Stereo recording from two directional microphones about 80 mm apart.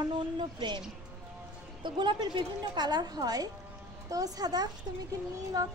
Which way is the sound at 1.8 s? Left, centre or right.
Right.